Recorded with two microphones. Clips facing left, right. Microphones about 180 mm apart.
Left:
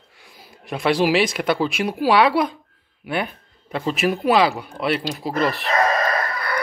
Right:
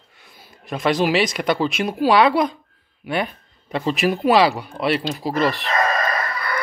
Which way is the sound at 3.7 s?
Centre (ahead or behind).